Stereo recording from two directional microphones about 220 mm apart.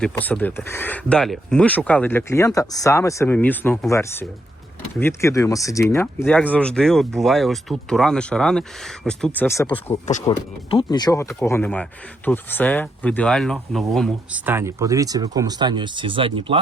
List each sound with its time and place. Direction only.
0.0 s speech: 5° left (ahead or behind)
10.2 s speech: 20° left (ahead or behind); by 16.6 s 25° right (ahead or behind)